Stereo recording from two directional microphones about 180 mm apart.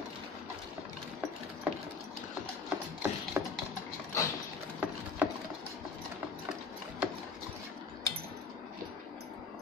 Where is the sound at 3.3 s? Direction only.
10° right (ahead or behind).